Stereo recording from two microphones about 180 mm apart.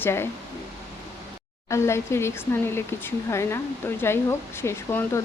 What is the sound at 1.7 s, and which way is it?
Speech, 15° left (ahead or behind).